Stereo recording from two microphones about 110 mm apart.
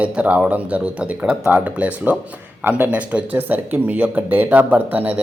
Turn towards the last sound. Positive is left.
turn(degrees=-15)  # may be behind; listen again after turning